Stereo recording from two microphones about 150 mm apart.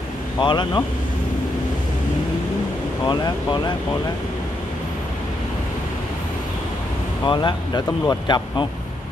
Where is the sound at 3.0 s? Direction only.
30° left (ahead or behind).